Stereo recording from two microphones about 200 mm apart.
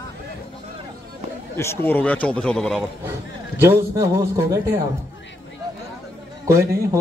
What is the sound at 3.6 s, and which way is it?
A man's voice, 15° right (ahead or behind).